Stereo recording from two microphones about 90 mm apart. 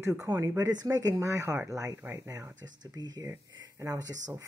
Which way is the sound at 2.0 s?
25° right (ahead or behind).